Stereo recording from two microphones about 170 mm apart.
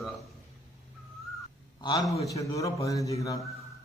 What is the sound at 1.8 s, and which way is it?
A man's voice, 20° left (ahead or behind).